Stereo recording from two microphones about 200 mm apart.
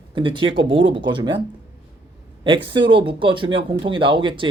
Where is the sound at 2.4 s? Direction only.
25° right (ahead or behind).